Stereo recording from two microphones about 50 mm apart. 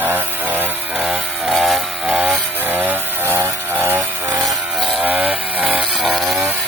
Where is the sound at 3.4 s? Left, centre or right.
Right.